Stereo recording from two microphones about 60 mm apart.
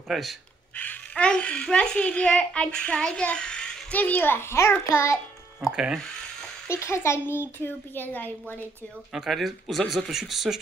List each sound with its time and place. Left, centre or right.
0.1 s speech: centre
0.7 s a child's voice: left
1.2 s a child's voice: centre
3.9 s a child's voice: left
5.7 s speech: centre
6.7 s a child's voice: left
9.1 s speech: centre